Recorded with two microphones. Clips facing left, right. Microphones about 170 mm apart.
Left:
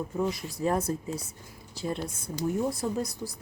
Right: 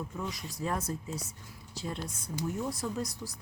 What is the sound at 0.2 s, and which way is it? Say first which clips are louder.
Speech: left 10 dB; 35° left (ahead or behind).